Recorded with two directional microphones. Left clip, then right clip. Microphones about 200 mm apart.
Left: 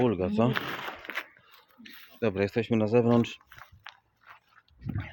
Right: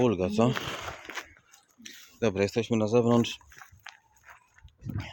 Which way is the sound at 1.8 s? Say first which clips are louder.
Right 1 dB; 15° right (ahead or behind).